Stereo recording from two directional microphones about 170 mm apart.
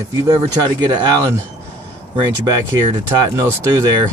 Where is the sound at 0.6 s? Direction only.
25° right (ahead or behind).